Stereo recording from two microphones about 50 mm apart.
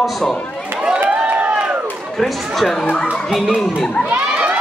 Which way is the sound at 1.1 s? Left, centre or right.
Right.